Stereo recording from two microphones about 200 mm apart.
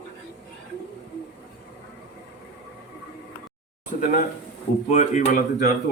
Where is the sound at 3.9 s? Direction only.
35° left (ahead or behind).